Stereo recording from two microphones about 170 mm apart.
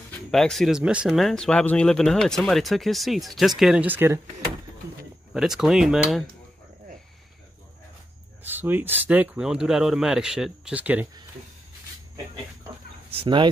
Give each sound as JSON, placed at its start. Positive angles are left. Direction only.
{"t": 0.1, "sound": "speech", "side_deg": 0}
{"t": 5.3, "sound": "speech", "side_deg": -5}
{"t": 8.5, "sound": "speech", "side_deg": -10}
{"t": 13.1, "sound": "speech", "side_deg": -30}